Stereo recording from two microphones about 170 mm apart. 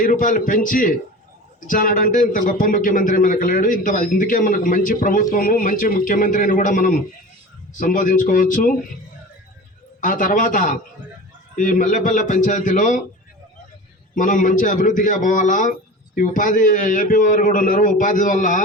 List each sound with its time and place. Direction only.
0.0 s speech: 50° left (ahead or behind)
10.0 s speech: 50° left (ahead or behind)
14.2 s speech: 50° left (ahead or behind)